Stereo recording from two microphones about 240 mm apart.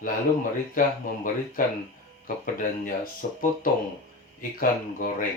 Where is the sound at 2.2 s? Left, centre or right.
Left.